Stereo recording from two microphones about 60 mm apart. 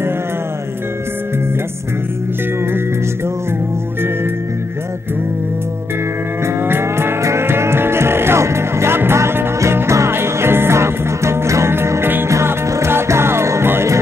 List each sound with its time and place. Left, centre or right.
6.4 s music: right
12.3 s music: right